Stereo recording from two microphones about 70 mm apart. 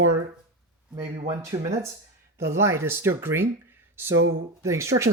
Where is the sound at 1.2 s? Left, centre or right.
Right.